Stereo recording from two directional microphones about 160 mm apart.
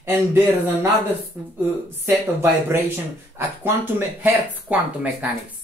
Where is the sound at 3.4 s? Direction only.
15° right (ahead or behind).